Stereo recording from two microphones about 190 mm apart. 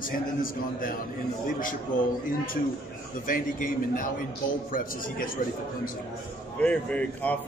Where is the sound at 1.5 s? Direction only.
45° left (ahead or behind).